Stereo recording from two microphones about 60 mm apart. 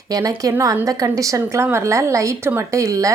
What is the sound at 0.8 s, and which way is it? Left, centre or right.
Speech, right.